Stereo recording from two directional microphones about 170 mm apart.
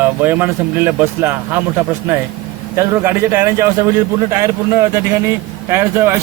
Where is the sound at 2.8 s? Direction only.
15° right (ahead or behind).